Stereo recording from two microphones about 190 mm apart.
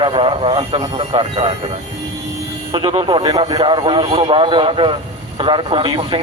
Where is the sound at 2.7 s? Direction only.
25° right (ahead or behind).